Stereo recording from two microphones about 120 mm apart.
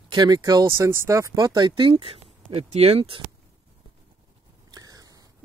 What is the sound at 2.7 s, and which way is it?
Speech, 60° right (ahead or behind).